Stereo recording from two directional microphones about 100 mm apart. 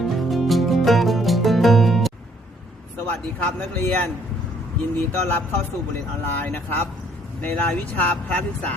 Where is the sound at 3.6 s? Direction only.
15° left (ahead or behind).